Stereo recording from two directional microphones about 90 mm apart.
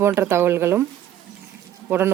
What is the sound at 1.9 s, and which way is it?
Speech, 25° right (ahead or behind).